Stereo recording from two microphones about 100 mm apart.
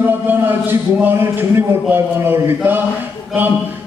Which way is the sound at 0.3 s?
20° right (ahead or behind).